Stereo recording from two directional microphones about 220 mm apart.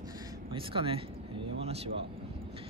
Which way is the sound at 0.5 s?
25° right (ahead or behind).